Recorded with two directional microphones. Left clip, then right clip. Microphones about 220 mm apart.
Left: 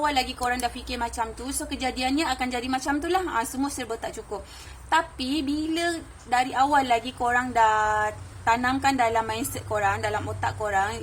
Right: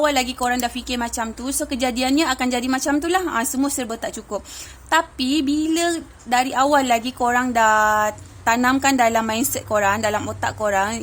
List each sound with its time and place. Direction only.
0.0 s a woman's voice: 40° right (ahead or behind)